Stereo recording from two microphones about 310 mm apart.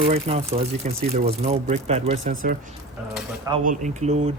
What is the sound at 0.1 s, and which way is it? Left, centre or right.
Speech, centre.